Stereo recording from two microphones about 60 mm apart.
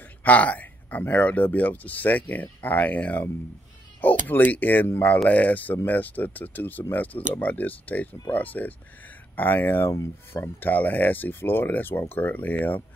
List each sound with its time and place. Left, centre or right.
0.2 s speech: left
10.7 s speech: left